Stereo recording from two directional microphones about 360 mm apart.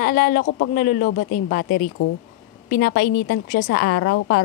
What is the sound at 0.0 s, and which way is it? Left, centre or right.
Speech, left.